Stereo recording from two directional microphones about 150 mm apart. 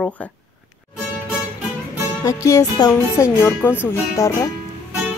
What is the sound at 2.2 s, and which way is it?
Speech, 20° left (ahead or behind).